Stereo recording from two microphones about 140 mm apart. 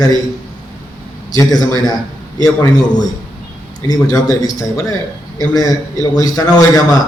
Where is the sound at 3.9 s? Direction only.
25° left (ahead or behind).